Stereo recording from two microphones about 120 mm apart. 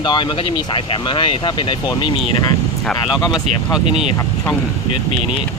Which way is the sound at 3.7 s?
5° right (ahead or behind).